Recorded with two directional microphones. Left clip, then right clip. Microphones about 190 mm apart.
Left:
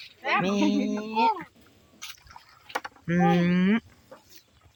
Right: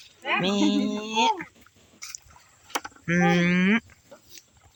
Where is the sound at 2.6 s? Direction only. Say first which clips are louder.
Right 3 dB; centre (ahead or behind).